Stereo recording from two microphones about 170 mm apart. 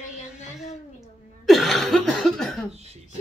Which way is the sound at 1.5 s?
Centre (ahead or behind).